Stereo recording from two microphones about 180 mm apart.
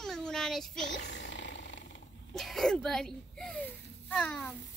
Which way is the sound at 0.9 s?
75° left (ahead or behind).